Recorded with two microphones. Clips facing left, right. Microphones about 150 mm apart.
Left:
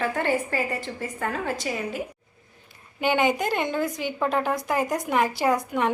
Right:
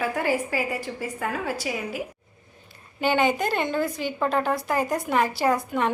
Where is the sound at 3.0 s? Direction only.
15° left (ahead or behind).